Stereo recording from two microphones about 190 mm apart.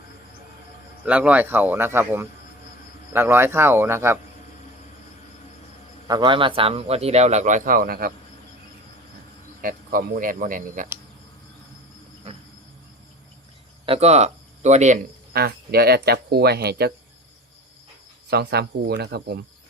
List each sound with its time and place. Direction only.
1.0 s speech: 5° right (ahead or behind)
6.1 s a man's voice: 25° right (ahead or behind); by 8.1 s 50° right (ahead or behind)
9.6 s speech: 50° right (ahead or behind)
13.8 s speech: 35° right (ahead or behind)
15.3 s speech: 55° right (ahead or behind)
18.3 s speech: 60° right (ahead or behind)